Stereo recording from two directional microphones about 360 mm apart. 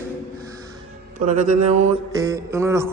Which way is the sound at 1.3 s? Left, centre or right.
Centre.